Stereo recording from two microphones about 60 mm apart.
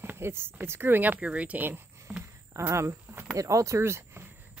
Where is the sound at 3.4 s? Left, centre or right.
Right.